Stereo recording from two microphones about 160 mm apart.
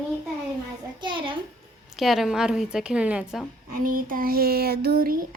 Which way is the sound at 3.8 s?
60° right (ahead or behind).